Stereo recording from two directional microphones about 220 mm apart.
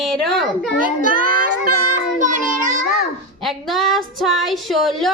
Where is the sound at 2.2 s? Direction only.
35° right (ahead or behind).